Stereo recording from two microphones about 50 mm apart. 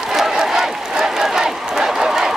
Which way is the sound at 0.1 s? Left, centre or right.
Centre.